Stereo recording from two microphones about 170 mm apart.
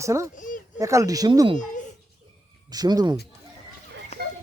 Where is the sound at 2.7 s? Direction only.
25° right (ahead or behind).